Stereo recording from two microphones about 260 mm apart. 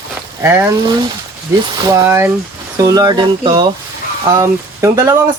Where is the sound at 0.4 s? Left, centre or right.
Centre.